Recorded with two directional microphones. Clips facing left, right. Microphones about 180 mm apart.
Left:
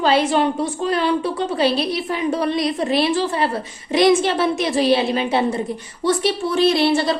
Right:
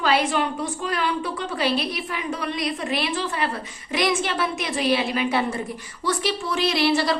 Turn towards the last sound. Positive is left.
turn(degrees=25)  # may be behind; listen again after turning